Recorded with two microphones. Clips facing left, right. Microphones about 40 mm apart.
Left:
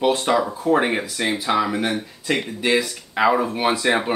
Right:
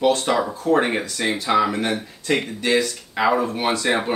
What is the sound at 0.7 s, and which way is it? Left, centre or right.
Speech, centre.